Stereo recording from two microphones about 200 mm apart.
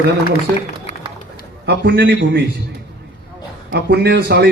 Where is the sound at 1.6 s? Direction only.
55° right (ahead or behind).